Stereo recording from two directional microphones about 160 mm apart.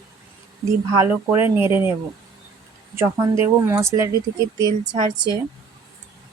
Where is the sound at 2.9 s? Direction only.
15° right (ahead or behind).